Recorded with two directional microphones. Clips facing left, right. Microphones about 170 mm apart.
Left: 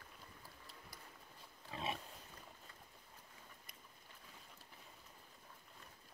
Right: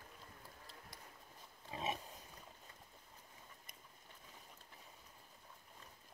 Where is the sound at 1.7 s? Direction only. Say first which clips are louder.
Right 1 dB; 20° right (ahead or behind).